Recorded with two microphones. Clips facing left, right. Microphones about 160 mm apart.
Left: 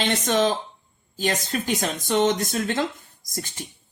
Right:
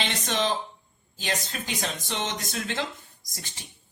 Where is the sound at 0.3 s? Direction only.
45° left (ahead or behind).